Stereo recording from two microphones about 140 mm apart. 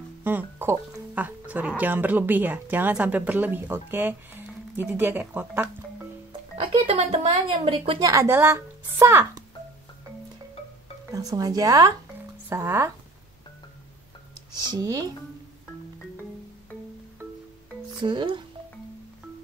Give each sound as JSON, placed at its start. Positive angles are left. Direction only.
{"t": 0.2, "sound": "a woman's voice", "side_deg": -15}
{"t": 6.9, "sound": "a woman's voice", "side_deg": -45}
{"t": 8.0, "sound": "speech", "side_deg": -25}
{"t": 11.1, "sound": "a woman's voice", "side_deg": -25}
{"t": 14.7, "sound": "speech", "side_deg": -30}
{"t": 17.9, "sound": "speech", "side_deg": -35}